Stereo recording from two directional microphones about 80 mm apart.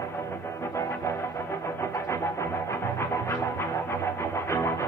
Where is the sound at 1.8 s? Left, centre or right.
Left.